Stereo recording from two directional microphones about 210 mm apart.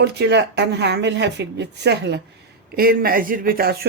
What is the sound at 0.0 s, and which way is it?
Speech, 55° right (ahead or behind).